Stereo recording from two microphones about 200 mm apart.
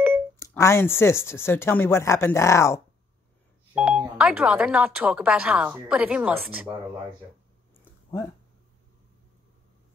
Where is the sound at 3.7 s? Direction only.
5° right (ahead or behind).